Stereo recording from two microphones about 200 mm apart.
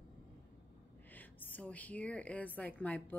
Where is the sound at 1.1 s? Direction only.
10° left (ahead or behind).